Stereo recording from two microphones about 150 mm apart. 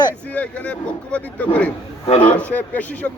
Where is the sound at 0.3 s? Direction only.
10° left (ahead or behind).